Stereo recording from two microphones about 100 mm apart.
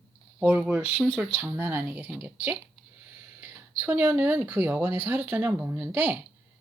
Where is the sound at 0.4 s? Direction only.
15° right (ahead or behind).